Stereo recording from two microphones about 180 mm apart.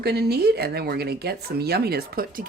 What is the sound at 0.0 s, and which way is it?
A woman's voice, 60° right (ahead or behind).